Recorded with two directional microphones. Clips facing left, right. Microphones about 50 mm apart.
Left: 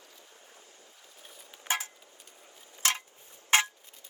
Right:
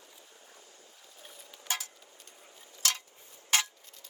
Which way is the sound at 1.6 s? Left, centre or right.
Left.